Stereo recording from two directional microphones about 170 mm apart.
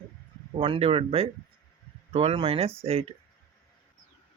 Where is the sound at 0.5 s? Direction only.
35° right (ahead or behind).